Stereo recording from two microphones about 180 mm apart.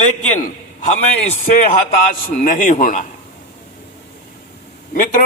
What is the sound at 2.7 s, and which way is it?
Speech, 40° left (ahead or behind).